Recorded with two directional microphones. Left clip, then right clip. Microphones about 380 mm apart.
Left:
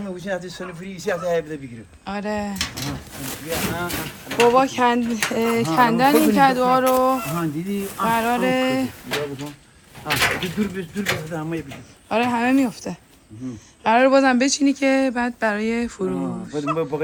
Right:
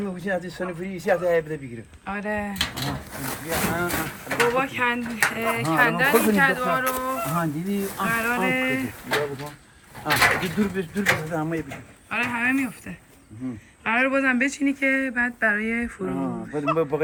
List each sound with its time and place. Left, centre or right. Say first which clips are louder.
0.3 s speech: right 1 dB; right
2.0 s speech: left 2 dB; centre
2.8 s speech: even; centre
4.9 s speech: even; centre
5.7 s speech: left 3 dB; centre
9.0 s speech: right 1 dB; centre
12.0 s speech: left 4 dB; centre